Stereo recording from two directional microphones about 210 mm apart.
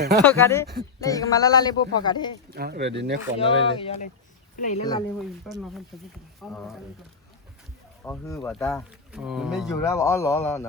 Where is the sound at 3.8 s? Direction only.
35° left (ahead or behind).